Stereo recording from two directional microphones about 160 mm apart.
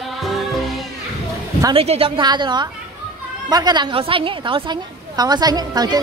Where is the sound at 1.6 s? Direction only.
35° right (ahead or behind).